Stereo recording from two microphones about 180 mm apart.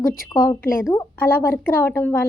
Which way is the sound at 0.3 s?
15° left (ahead or behind).